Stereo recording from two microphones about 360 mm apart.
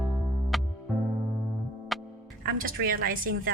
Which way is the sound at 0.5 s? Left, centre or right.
Centre.